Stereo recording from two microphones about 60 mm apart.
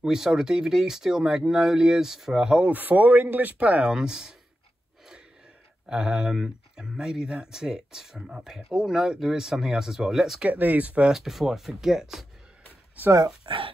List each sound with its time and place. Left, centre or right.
0.0 s speech: centre
2.7 s speech: right; by 4.4 s centre
5.9 s speech: centre
10.4 s speech: right
11.1 s speech: centre